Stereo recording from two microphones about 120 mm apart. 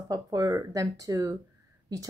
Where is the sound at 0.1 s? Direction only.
30° right (ahead or behind).